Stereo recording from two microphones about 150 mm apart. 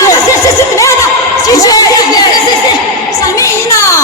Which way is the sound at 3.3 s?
20° left (ahead or behind).